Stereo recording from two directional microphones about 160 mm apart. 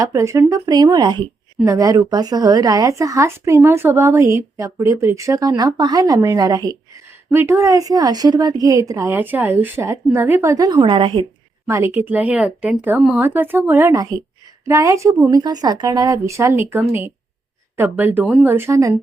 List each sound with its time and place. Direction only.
0.0 s speech: 20° right (ahead or behind)
11.6 s speech: 15° right (ahead or behind)